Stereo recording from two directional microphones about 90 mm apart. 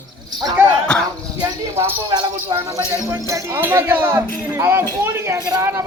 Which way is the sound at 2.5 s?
35° right (ahead or behind).